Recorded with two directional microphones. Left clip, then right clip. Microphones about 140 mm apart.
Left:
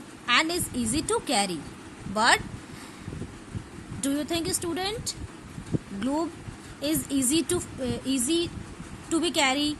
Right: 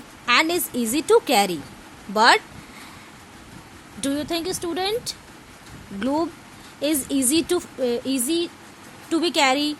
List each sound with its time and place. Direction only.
0.3 s a woman's voice: 65° right (ahead or behind)
4.0 s a woman's voice: 45° right (ahead or behind); by 9.7 s 60° right (ahead or behind)